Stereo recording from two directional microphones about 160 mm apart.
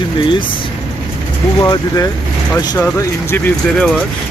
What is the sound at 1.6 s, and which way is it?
Speech, 25° left (ahead or behind).